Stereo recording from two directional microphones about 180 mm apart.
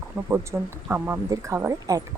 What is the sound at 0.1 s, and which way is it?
Speech, 10° right (ahead or behind).